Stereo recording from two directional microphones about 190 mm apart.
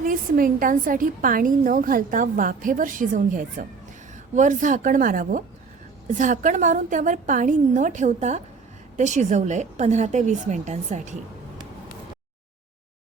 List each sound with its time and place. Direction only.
0.0 s a woman's voice: 45° right (ahead or behind)